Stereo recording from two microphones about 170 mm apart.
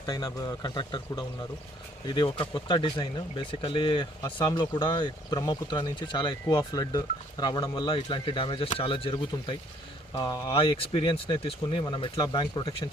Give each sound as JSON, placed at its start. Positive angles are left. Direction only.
{"t": 0.0, "sound": "speech", "side_deg": 20}